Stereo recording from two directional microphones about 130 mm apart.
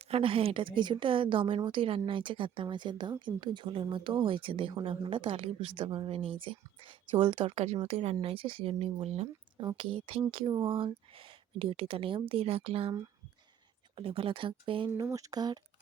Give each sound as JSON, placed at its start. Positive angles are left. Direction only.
{"t": 0.0, "sound": "speech", "side_deg": -45}
{"t": 7.5, "sound": "speech", "side_deg": -55}
{"t": 9.6, "sound": "speech", "side_deg": -40}
{"t": 13.9, "sound": "speech", "side_deg": -45}
{"t": 14.9, "sound": "speech", "side_deg": -25}